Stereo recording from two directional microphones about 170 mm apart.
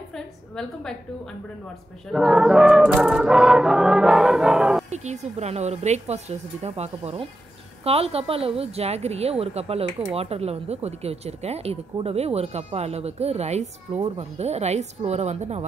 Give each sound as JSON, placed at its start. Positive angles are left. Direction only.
{"t": 0.1, "sound": "a sound", "side_deg": 5}
{"t": 2.0, "sound": "music", "side_deg": 0}
{"t": 4.8, "sound": "speech", "side_deg": -40}